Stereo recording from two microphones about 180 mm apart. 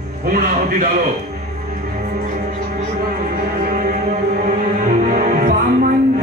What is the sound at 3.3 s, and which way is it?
Music, 50° right (ahead or behind).